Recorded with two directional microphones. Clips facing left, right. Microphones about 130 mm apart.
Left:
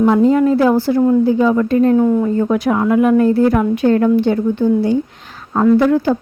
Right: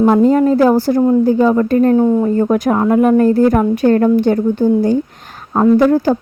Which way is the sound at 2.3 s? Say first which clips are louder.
Right 2 dB; 45° right (ahead or behind).